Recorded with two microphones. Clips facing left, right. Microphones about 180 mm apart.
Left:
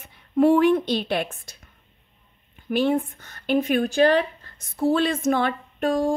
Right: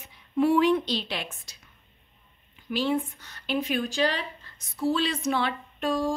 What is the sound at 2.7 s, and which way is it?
Speech, 55° left (ahead or behind).